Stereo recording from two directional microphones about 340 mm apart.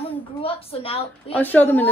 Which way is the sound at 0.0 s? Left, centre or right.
Centre.